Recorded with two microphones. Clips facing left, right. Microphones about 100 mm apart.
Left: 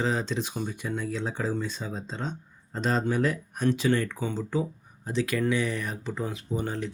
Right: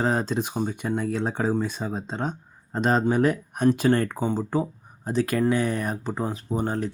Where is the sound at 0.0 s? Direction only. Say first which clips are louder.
Right 4 dB; 45° right (ahead or behind).